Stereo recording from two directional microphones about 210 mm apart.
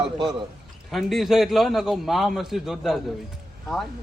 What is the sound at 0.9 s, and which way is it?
A man's voice, centre (ahead or behind).